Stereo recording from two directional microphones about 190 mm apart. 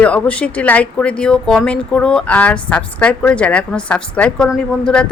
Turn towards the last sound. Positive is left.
turn(degrees=5)  # may be behind; listen again after turning